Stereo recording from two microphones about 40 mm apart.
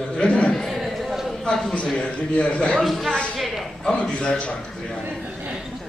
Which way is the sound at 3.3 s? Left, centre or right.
Centre.